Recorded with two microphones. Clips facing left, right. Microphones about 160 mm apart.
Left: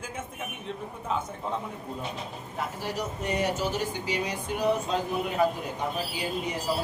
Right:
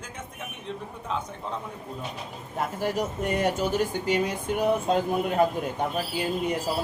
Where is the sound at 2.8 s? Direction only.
50° right (ahead or behind).